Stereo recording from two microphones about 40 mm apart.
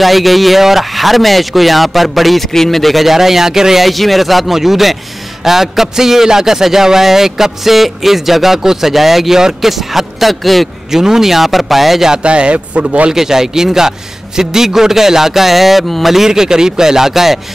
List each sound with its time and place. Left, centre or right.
0.0 s a man's voice: centre
10.9 s a man's voice: centre
12.2 s speech: right
13.1 s a man's voice: centre
16.3 s a man's voice: centre